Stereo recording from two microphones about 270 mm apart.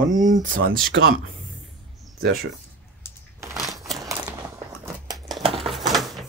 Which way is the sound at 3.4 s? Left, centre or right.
Centre.